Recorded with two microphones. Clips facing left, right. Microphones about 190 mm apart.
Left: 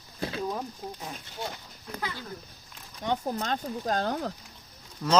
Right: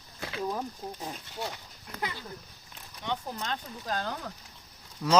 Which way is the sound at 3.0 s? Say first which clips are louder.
Left 5 dB; 45° left (ahead or behind).